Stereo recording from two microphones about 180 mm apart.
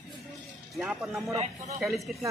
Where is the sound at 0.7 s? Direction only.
Centre (ahead or behind).